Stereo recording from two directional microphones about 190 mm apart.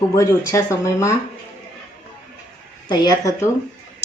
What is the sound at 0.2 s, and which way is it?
Speech, 15° left (ahead or behind).